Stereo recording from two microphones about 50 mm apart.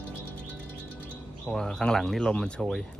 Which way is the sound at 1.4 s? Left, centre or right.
Centre.